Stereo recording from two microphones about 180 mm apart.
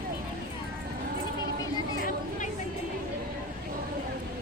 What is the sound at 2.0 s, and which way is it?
Chatter, 50° left (ahead or behind).